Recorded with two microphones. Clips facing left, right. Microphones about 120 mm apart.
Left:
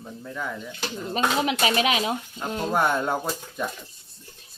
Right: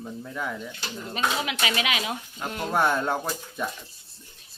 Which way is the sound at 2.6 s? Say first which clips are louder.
Left 1 dB; centre (ahead or behind).